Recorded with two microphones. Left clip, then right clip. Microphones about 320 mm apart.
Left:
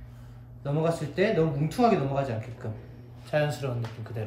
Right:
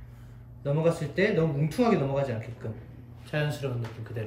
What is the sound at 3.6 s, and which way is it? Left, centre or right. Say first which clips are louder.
Speech: even; left.